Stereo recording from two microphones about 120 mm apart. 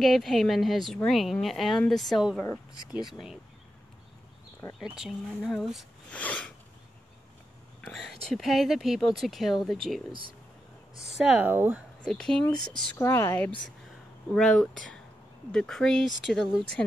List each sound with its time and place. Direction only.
0.0 s speech: centre (ahead or behind)
4.7 s speech: 5° right (ahead or behind)
6.0 s a sound: 10° left (ahead or behind)
7.8 s speech: 5° left (ahead or behind); by 11.8 s 15° right (ahead or behind)
12.1 s speech: 5° left (ahead or behind)
12.9 s speech: 20° left (ahead or behind)
14.3 s speech: 5° left (ahead or behind)